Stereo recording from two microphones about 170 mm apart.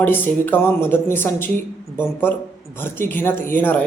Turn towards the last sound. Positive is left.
turn(degrees=10)  # may be behind; listen again after turning